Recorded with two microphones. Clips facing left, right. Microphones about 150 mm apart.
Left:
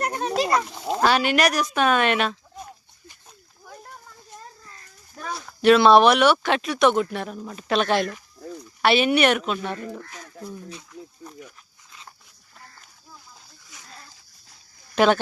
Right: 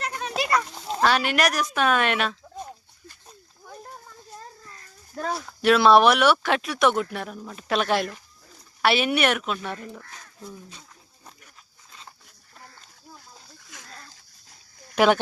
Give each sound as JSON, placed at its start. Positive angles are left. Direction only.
{"t": 0.0, "sound": "a sound", "side_deg": 40}
{"t": 1.0, "sound": "speech", "side_deg": 0}
{"t": 5.5, "sound": "speech", "side_deg": 0}
{"t": 14.9, "sound": "speech", "side_deg": -10}